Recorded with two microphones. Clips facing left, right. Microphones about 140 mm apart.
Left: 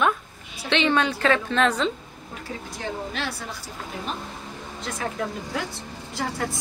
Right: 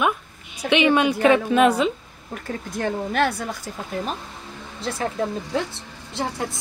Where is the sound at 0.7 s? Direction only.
15° right (ahead or behind).